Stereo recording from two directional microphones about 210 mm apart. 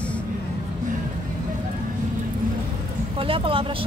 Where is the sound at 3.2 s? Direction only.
25° right (ahead or behind).